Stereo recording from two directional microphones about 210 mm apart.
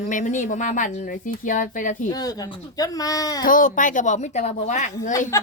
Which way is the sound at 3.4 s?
40° left (ahead or behind).